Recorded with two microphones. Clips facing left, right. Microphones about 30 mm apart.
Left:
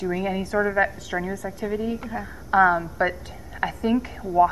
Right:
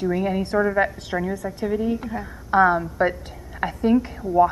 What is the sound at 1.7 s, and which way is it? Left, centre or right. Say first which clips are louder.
A woman's voice: right 4 dB; centre.